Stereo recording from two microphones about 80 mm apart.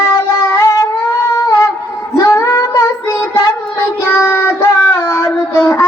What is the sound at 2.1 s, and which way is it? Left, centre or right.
Child singing, left.